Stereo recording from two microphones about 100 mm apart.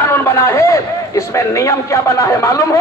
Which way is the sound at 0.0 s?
25° left (ahead or behind).